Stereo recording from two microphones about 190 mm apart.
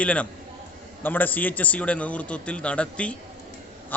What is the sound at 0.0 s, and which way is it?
A man's voice, 5° left (ahead or behind).